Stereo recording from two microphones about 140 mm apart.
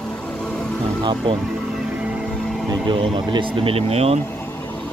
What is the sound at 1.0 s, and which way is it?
Speech, 35° right (ahead or behind).